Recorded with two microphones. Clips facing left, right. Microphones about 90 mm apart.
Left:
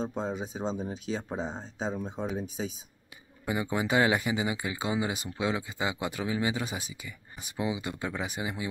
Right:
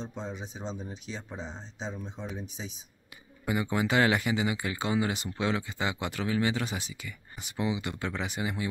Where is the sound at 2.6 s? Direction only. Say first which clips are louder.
Left 7 dB; 75° left (ahead or behind).